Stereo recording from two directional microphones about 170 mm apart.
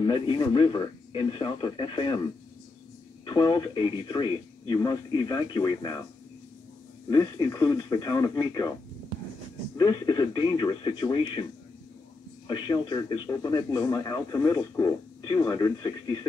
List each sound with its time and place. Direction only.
0.0 s a man's voice: 30° left (ahead or behind)
3.3 s a man's voice: 25° left (ahead or behind)
7.1 s a man's voice: 20° left (ahead or behind)
9.8 s a man's voice: 25° left (ahead or behind)
12.4 s a man's voice: 25° left (ahead or behind)